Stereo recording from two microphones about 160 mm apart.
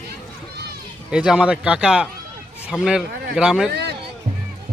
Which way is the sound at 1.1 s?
5° right (ahead or behind).